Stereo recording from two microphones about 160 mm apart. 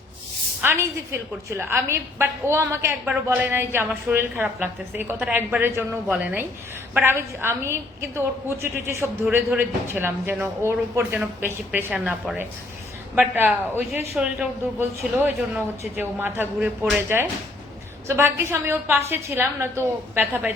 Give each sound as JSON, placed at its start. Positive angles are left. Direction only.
{"t": 0.6, "sound": "a woman's voice", "side_deg": -15}
{"t": 11.9, "sound": "a woman's voice", "side_deg": 0}
{"t": 18.1, "sound": "a woman's voice", "side_deg": -15}